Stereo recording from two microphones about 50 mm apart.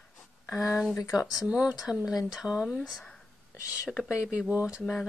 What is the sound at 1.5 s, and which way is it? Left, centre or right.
Speech, right.